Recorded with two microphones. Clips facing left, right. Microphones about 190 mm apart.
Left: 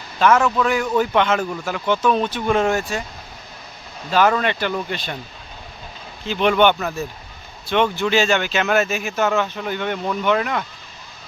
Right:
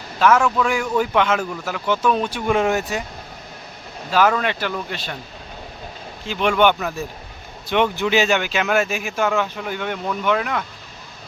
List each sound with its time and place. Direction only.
0.2 s a man's voice: 5° right (ahead or behind)
4.1 s speech: 5° right (ahead or behind)
6.2 s a man's voice: 5° right (ahead or behind)